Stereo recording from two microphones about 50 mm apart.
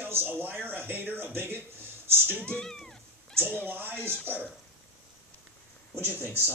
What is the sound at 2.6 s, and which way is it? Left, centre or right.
Cat, centre.